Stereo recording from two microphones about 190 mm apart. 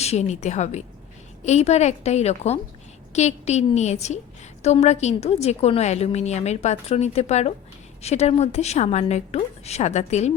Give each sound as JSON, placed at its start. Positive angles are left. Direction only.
{"t": 0.0, "sound": "a woman's voice", "side_deg": 35}